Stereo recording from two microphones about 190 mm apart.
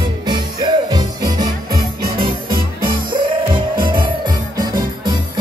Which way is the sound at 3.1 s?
25° right (ahead or behind).